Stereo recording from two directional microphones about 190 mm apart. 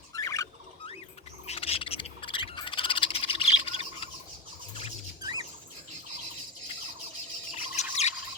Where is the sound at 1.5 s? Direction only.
30° left (ahead or behind).